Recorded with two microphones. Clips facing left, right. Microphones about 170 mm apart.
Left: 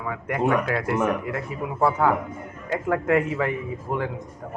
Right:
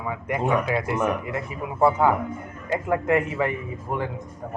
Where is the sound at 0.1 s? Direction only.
10° right (ahead or behind).